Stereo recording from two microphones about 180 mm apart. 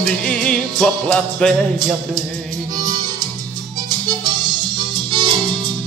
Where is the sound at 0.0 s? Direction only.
5° left (ahead or behind).